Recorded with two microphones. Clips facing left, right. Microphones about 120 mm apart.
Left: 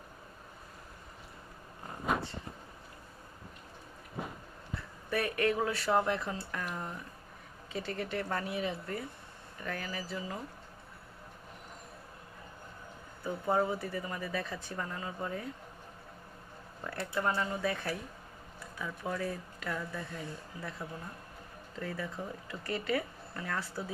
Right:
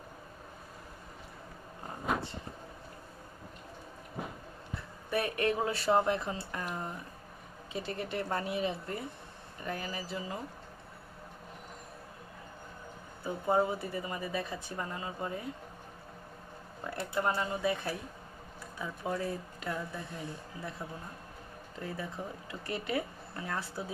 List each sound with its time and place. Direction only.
5.1 s speech: 20° right (ahead or behind)
7.7 s speech: 20° right (ahead or behind)
13.2 s speech: 15° right (ahead or behind)
16.8 s speech: 15° right (ahead or behind)